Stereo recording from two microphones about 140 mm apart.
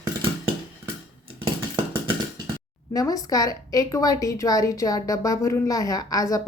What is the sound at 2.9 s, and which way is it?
A woman's voice, 25° left (ahead or behind).